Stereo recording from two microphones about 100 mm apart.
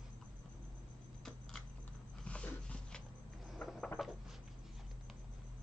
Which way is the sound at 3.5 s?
5° left (ahead or behind).